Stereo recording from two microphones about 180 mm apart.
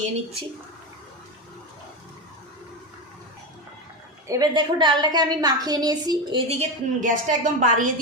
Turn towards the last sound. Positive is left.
turn(degrees=-45)  # may be behind; listen again after turning